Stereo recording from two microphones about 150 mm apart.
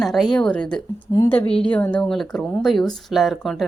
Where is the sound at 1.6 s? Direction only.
10° left (ahead or behind).